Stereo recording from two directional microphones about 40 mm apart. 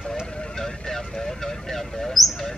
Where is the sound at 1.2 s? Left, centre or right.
Centre.